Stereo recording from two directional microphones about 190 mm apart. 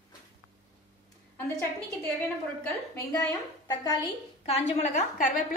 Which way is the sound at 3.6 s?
20° left (ahead or behind).